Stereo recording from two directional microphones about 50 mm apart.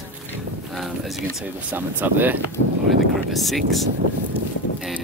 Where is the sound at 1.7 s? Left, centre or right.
Right.